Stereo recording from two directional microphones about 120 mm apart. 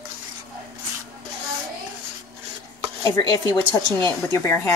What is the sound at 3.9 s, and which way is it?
Speech, 20° left (ahead or behind).